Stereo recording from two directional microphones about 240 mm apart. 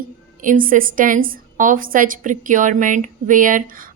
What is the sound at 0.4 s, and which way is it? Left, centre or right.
A woman's voice, right.